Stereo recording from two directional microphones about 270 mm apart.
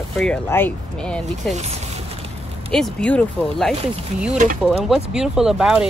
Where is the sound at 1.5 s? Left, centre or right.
Right.